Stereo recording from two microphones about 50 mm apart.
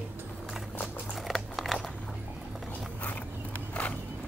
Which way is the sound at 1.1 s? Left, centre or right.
Centre.